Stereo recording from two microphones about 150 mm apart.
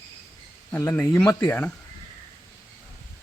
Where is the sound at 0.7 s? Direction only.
15° left (ahead or behind).